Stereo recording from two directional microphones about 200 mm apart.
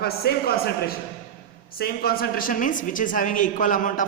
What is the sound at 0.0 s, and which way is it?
A man's voice, 50° left (ahead or behind).